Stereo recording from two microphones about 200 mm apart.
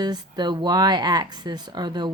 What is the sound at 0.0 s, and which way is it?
Speech, 20° right (ahead or behind).